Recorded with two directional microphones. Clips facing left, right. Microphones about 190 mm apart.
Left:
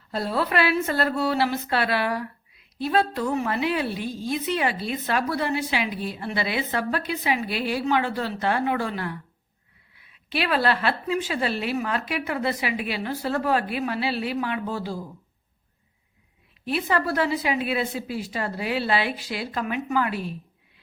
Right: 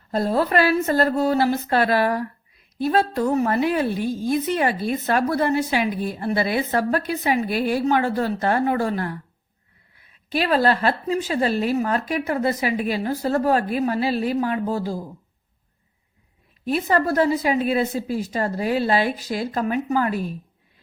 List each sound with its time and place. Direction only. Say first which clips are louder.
0.1 s a woman's voice: right 5 dB; 45° right (ahead or behind)
16.6 s a woman's voice: right 4 dB; 45° right (ahead or behind)